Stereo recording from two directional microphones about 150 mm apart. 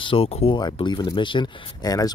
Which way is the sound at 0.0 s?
40° left (ahead or behind).